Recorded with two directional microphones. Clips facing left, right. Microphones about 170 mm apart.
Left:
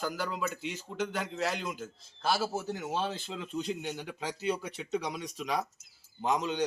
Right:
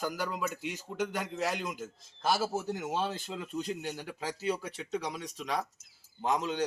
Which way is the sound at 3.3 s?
5° right (ahead or behind).